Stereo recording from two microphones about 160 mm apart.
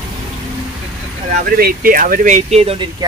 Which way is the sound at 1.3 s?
65° right (ahead or behind).